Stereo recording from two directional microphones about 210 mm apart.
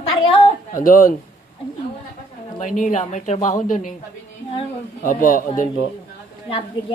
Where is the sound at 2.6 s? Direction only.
40° left (ahead or behind).